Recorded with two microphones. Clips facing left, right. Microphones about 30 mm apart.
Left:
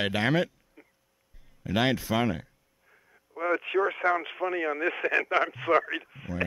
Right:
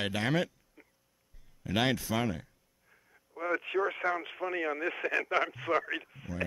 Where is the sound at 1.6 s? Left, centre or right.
Centre.